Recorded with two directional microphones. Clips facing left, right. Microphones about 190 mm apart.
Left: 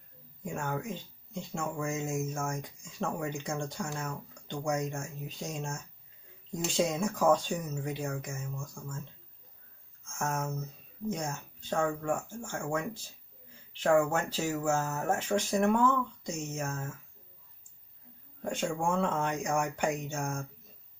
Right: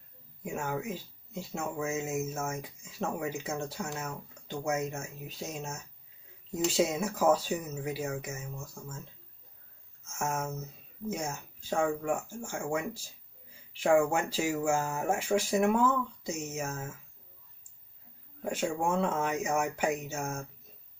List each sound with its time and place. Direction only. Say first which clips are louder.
0.4 s speech: right 1 dB; 5° right (ahead or behind)
10.0 s speech: even; 5° right (ahead or behind)
18.4 s speech: right 1 dB; 5° right (ahead or behind)